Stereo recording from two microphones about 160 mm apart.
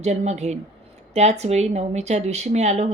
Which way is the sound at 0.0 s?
45° right (ahead or behind).